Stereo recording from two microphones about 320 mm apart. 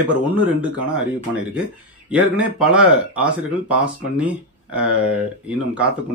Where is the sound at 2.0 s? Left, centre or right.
Centre.